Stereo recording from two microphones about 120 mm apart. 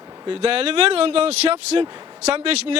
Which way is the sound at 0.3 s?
50° right (ahead or behind).